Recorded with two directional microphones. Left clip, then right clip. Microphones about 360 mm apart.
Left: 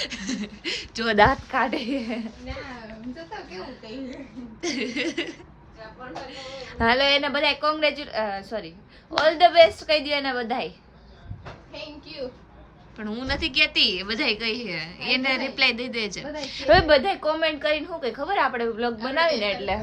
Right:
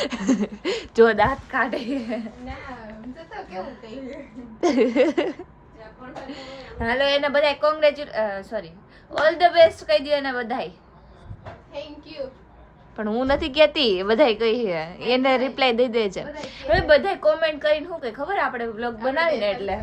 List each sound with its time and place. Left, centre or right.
0.0 s speech: centre
1.1 s a woman's voice: left
1.5 s a woman's voice: centre
4.6 s a woman's voice: centre
13.0 s a woman's voice: centre